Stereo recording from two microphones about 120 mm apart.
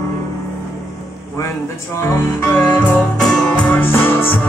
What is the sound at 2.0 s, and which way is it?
Music, 15° left (ahead or behind).